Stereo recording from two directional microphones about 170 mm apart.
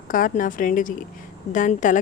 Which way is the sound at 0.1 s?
50° left (ahead or behind).